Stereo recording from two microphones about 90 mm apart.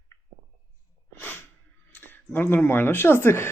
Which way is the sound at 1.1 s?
20° left (ahead or behind).